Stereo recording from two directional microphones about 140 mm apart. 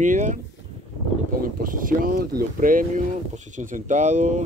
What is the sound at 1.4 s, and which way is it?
Speech, 75° right (ahead or behind).